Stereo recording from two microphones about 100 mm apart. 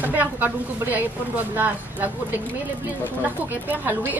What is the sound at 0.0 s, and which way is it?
Speech, 20° right (ahead or behind).